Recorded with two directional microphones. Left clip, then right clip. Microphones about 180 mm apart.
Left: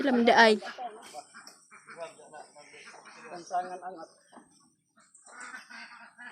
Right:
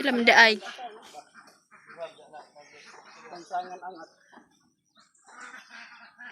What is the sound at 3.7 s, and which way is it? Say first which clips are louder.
Bird: even; 5° left (ahead or behind).